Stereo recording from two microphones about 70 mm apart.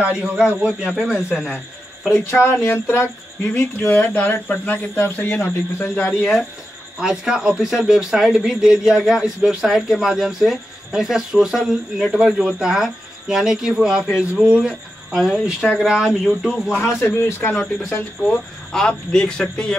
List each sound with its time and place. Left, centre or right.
0.0 s a man's voice: centre
2.4 s a sound: left
3.5 s speech: left
6.0 s a man's voice: centre
15.1 s speech: centre
17.0 s a sound: left
18.3 s speech: centre